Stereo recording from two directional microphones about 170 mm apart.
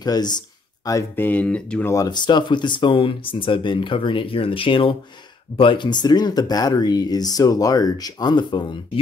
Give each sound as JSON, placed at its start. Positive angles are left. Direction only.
{"t": 0.0, "sound": "speech", "side_deg": 25}